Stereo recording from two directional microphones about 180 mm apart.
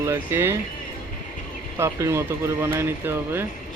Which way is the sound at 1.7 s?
15° right (ahead or behind).